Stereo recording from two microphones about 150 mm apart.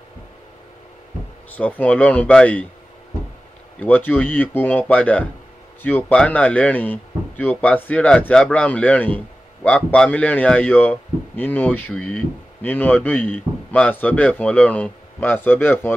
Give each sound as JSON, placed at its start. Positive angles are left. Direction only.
{"t": 1.6, "sound": "speech", "side_deg": 10}
{"t": 3.8, "sound": "speech", "side_deg": 10}